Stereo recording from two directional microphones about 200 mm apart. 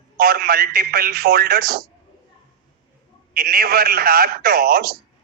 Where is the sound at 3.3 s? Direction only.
50° right (ahead or behind).